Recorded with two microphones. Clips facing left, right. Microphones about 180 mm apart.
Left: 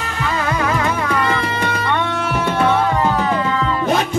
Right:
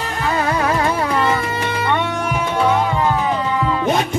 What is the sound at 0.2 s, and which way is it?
Music, 30° right (ahead or behind).